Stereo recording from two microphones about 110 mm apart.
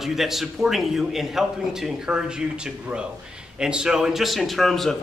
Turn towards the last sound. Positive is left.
turn(degrees=0)  # may be behind; listen again after turning